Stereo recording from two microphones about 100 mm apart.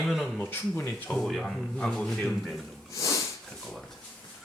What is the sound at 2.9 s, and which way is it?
Sniff, 30° left (ahead or behind).